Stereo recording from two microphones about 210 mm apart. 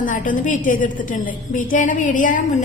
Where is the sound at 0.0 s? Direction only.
40° left (ahead or behind).